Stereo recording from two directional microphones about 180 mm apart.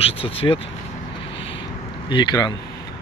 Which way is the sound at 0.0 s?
30° left (ahead or behind).